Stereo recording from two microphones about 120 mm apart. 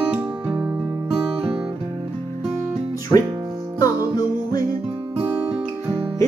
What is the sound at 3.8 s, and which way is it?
Music, 30° left (ahead or behind).